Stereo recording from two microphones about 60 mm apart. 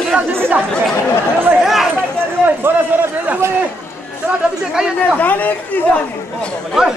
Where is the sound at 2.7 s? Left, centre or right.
Right.